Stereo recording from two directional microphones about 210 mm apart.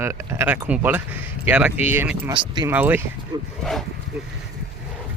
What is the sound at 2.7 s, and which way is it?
Speech, 10° right (ahead or behind).